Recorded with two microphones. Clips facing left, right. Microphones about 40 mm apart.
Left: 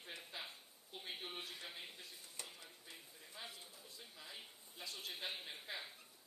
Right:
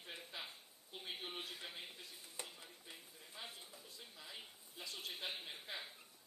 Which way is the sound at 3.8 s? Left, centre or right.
Centre.